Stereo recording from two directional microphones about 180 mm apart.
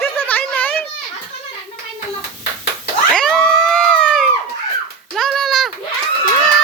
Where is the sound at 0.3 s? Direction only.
10° left (ahead or behind).